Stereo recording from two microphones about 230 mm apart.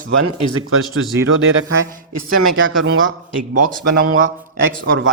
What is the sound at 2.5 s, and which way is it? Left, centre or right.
Speech, right.